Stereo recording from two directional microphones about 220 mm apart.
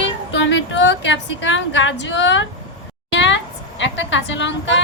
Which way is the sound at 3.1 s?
55° left (ahead or behind).